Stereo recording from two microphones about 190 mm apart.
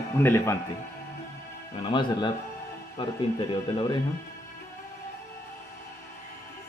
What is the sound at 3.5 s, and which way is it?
Speech, 25° left (ahead or behind).